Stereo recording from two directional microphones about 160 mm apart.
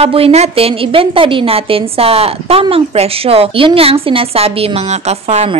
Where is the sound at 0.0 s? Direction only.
40° right (ahead or behind).